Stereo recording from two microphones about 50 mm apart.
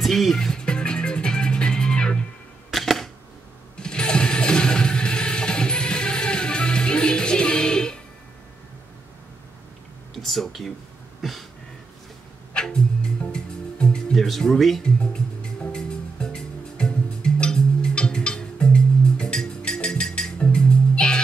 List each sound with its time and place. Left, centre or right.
0.0 s music: centre
2.7 s camera: centre
3.7 s music: centre
10.1 s a sound: centre
12.5 s music: centre
14.1 s speech: centre
15.0 s music: centre